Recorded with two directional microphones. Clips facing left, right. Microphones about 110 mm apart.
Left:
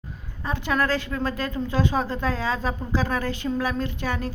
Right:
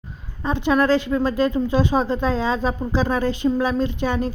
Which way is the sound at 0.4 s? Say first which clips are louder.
Right 6 dB; 20° right (ahead or behind).